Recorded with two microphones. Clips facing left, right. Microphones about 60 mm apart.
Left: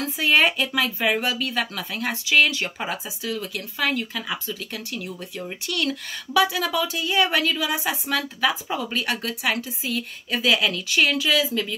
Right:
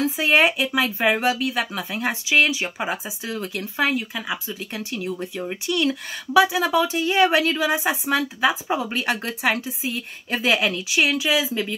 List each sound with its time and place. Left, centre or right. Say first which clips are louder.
0.2 s speech: even; centre
0.9 s speech: right 3 dB; right
1.4 s speech: right 2 dB; centre
3.3 s speech: right 3 dB; right
3.8 s speech: right 2 dB; centre
4.7 s speech: right 4 dB; right
10.9 s speech: even; centre